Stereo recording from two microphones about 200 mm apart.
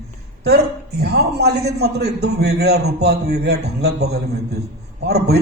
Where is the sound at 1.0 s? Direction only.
55° right (ahead or behind).